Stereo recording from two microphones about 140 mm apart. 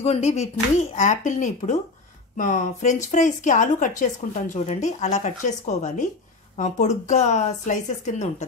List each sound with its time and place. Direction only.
0.0 s a woman's voice: 50° left (ahead or behind)